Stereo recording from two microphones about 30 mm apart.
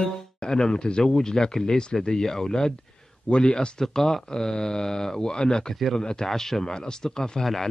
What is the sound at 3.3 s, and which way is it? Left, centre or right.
Speech, left.